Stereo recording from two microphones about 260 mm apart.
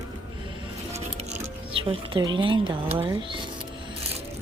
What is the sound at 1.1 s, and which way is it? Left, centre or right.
Music, right.